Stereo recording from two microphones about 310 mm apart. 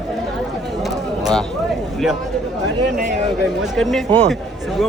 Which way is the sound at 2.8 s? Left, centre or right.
Right.